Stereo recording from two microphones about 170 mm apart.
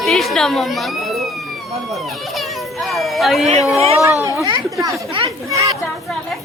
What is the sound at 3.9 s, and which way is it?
Speech, 20° left (ahead or behind).